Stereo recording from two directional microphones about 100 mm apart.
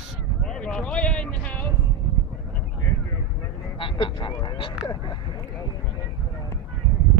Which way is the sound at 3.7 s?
60° left (ahead or behind).